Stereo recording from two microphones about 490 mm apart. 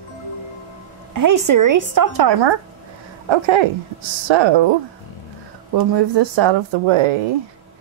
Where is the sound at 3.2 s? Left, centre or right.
Right.